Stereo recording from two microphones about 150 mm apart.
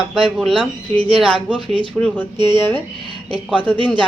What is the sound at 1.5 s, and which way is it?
Speech, 35° right (ahead or behind).